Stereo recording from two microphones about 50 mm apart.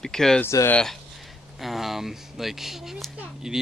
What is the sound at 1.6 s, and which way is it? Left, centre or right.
Speech, centre.